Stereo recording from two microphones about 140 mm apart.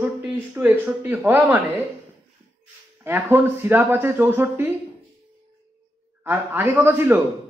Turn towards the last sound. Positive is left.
turn(degrees=-15)  # may be behind; listen again after turning